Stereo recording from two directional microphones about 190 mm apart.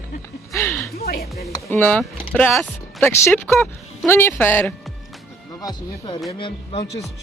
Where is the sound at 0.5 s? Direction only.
15° left (ahead or behind).